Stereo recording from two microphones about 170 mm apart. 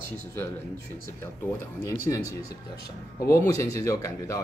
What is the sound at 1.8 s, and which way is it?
Speech, 20° left (ahead or behind).